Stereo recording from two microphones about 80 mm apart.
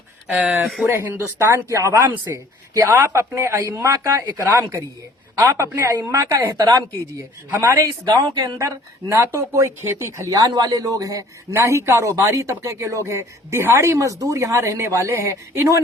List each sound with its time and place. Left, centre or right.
0.3 s speech: centre
0.6 s speech: centre
0.9 s speech: right
5.4 s speech: right
8.0 s speech: right
8.5 s speech: right